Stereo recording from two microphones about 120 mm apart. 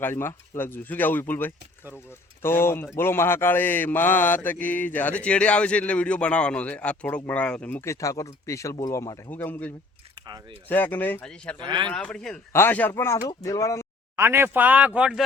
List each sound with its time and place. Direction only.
0.0 s a man's voice: 20° left (ahead or behind)
7.9 s speech: 25° left (ahead or behind)
9.3 s a man's voice: 15° left (ahead or behind)
10.2 s biting: 35° right (ahead or behind)
10.7 s a man's voice: 15° left (ahead or behind)
11.6 s speech: 40° right (ahead or behind)
11.9 s a man's voice: 5° left (ahead or behind)
12.5 s speech: 15° left (ahead or behind)
14.2 s speech: 20° right (ahead or behind)